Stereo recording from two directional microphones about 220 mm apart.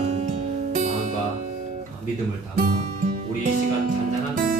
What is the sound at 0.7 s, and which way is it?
Music, 30° right (ahead or behind).